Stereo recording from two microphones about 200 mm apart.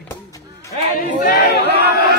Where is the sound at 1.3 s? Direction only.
55° left (ahead or behind).